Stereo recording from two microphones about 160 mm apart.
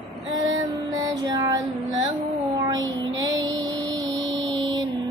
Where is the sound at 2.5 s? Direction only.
25° right (ahead or behind).